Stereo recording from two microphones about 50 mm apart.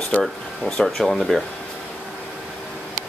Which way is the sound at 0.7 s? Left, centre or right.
Centre.